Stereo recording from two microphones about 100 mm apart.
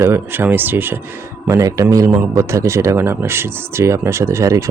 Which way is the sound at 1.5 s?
35° right (ahead or behind).